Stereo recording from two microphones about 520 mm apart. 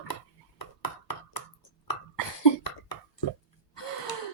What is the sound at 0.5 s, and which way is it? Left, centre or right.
Ping, left.